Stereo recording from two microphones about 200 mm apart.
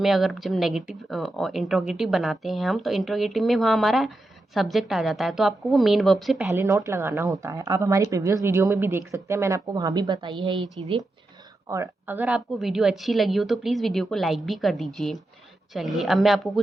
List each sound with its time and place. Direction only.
0.0 s speech: centre (ahead or behind)
6.5 s speech: 15° right (ahead or behind)
11.7 s speech: 10° right (ahead or behind)